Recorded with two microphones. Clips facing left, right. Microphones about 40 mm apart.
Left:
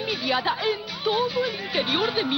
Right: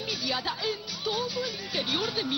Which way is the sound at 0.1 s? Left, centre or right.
Left.